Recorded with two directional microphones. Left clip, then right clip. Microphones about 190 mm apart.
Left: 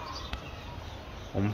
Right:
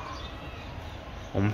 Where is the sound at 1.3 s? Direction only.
5° left (ahead or behind).